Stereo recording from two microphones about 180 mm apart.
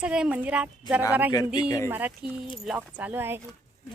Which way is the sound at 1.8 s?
10° right (ahead or behind).